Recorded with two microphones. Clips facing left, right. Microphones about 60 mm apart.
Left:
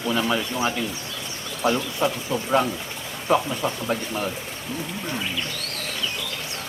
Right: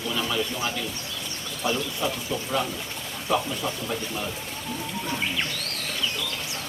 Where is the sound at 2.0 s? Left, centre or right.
Left.